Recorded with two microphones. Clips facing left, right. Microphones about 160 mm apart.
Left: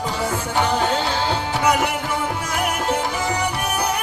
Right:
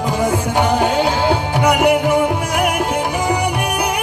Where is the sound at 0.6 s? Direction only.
10° right (ahead or behind).